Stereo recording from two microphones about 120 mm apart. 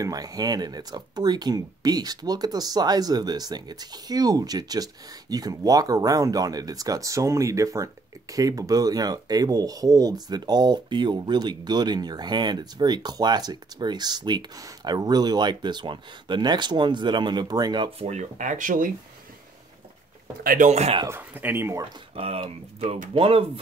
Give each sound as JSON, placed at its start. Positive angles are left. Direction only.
{"t": 0.0, "sound": "speech", "side_deg": -30}
{"t": 18.0, "sound": "speech", "side_deg": -75}
{"t": 20.5, "sound": "speech", "side_deg": -80}
{"t": 21.1, "sound": "speech", "side_deg": -15}
{"t": 22.1, "sound": "speech", "side_deg": -50}